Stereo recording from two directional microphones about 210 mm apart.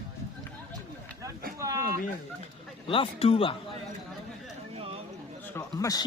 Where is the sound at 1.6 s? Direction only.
15° right (ahead or behind).